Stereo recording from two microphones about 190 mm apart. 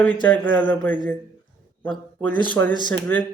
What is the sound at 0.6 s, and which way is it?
Speech, 5° left (ahead or behind).